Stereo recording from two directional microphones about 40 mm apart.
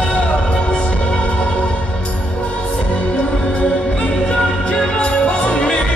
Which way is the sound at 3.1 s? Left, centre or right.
Left.